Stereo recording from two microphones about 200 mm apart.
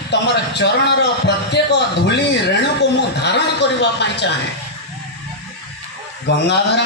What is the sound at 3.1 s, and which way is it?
Speech, 60° left (ahead or behind).